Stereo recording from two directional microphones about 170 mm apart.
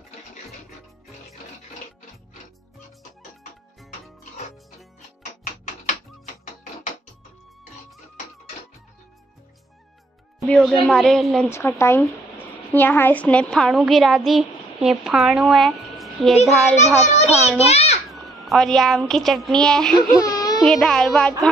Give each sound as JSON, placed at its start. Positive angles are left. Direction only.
{"t": 10.4, "sound": "a child's voice", "side_deg": 0}
{"t": 11.5, "sound": "a woman's voice", "side_deg": 15}
{"t": 16.7, "sound": "a child's voice", "side_deg": 40}
{"t": 17.6, "sound": "a sound", "side_deg": 35}
{"t": 18.1, "sound": "a woman's voice", "side_deg": 0}
{"t": 20.0, "sound": "baby cry", "side_deg": 20}
{"t": 20.6, "sound": "a child's voice", "side_deg": 5}